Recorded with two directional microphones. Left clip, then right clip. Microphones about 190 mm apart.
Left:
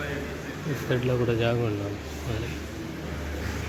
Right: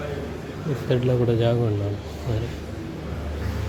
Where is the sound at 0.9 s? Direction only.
20° right (ahead or behind).